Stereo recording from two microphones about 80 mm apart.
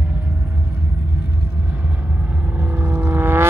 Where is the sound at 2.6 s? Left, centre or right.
Right.